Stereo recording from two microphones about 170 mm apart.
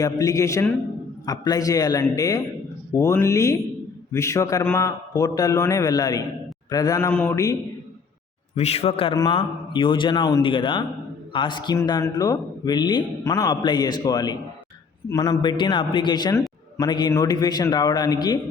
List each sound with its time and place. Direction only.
0.0 s a man's voice: 20° left (ahead or behind)
8.5 s a man's voice: 40° left (ahead or behind)